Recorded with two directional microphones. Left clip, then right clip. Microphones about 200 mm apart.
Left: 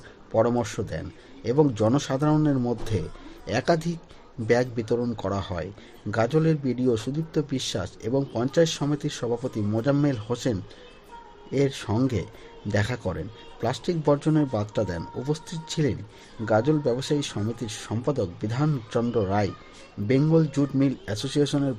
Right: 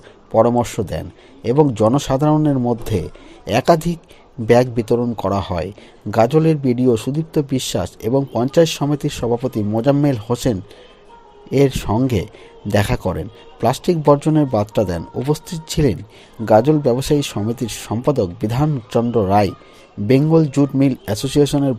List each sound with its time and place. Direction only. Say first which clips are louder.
0.3 s speech: right 9 dB; 20° right (ahead or behind)